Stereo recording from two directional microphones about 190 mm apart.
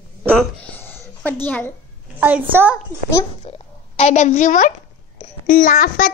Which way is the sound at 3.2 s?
35° left (ahead or behind).